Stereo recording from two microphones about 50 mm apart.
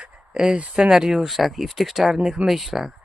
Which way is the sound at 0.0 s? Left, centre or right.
Centre.